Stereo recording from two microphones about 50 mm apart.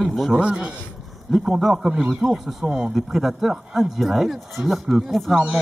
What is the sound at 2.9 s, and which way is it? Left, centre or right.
Speech, centre.